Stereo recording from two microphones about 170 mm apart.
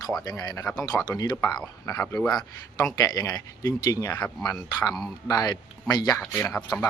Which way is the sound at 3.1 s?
20° left (ahead or behind).